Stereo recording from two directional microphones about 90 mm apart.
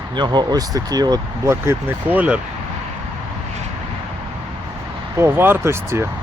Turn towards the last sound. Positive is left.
turn(degrees=-30)  # may be behind; listen again after turning